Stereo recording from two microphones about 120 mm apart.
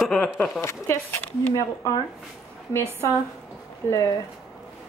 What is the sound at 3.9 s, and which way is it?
Speech, 25° left (ahead or behind).